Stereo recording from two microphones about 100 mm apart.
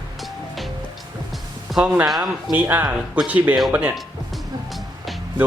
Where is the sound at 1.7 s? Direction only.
10° right (ahead or behind).